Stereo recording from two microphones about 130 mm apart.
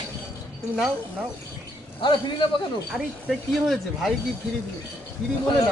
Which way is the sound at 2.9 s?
Centre (ahead or behind).